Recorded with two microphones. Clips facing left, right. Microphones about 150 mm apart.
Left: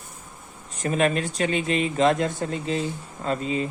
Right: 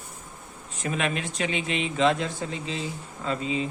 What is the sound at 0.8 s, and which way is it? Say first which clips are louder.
Speech: left 6 dB; 40° left (ahead or behind).